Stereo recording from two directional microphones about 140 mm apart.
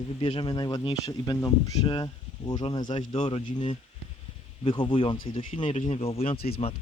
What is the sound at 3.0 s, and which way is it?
Speech, 55° left (ahead or behind).